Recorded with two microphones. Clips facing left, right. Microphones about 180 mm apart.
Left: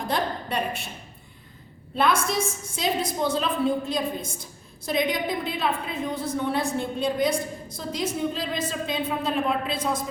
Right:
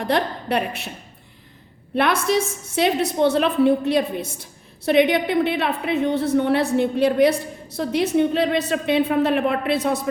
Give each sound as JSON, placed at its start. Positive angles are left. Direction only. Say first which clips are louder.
{"t": 0.0, "sound": "a woman's voice", "louder": "right 5 dB", "side_deg": -65}
{"t": 2.0, "sound": "a woman's voice", "louder": "right 4 dB", "side_deg": -65}